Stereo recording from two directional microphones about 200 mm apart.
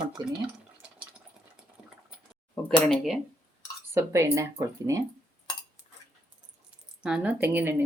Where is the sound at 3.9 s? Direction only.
15° right (ahead or behind).